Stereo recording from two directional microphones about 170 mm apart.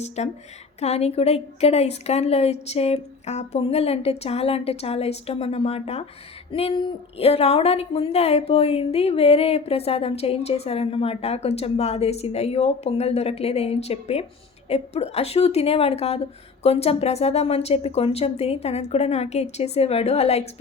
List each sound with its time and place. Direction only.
0.2 s a woman's voice: 40° left (ahead or behind)